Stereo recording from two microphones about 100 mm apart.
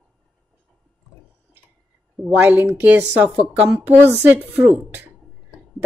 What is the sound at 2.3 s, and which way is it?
Speech, 20° right (ahead or behind).